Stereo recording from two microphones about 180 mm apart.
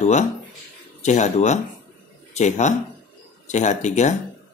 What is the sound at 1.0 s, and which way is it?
A man's voice, 40° left (ahead or behind).